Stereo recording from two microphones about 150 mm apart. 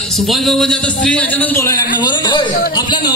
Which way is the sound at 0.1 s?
Centre (ahead or behind).